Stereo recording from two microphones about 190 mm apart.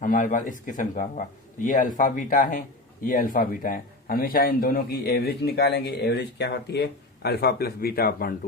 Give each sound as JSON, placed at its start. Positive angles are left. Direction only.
{"t": 0.0, "sound": "a man's voice", "side_deg": 45}